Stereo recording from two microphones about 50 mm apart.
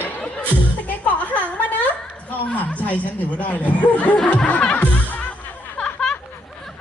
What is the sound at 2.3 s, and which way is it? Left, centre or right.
Speech, left.